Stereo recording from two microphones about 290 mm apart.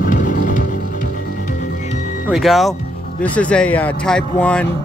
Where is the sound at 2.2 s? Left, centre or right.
Centre.